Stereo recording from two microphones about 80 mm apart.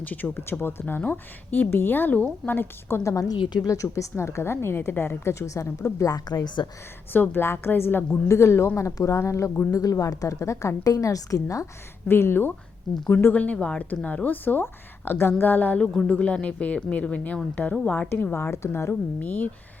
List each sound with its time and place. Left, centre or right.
0.0 s speech: left
3.0 s a woman's voice: left
6.1 s a woman's voice: left
7.1 s a woman's voice: left
12.0 s speech: left